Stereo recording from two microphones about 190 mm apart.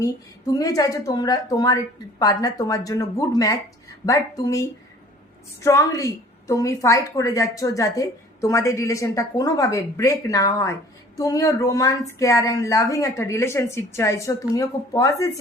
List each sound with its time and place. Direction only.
0.0 s a woman's voice: 20° left (ahead or behind)